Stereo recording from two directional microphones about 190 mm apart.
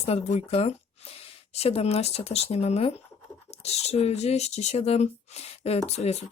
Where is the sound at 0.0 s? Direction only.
35° left (ahead or behind).